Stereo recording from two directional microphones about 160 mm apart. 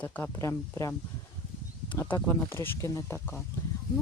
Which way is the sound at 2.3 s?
15° left (ahead or behind).